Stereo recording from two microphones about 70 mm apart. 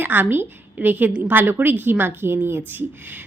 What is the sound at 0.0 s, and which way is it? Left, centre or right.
A woman's voice, right.